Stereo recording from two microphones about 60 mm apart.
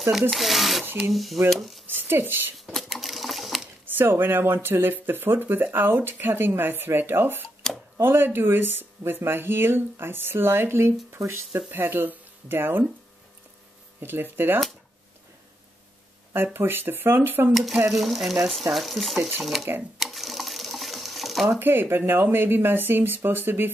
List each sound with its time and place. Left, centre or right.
0.3 s speech: centre
1.9 s speech: right
2.6 s a sound: centre
3.8 s speech: right
14.0 s speech: right
16.5 s speech: right
17.9 s speech: centre
20.0 s sewing machine: centre
21.5 s speech: right